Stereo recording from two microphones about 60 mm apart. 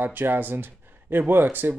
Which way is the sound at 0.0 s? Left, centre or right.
Right.